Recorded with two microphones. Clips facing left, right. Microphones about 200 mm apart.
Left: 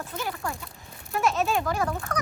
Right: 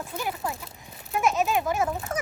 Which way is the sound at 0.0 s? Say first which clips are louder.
Right 1 dB; 15° right (ahead or behind).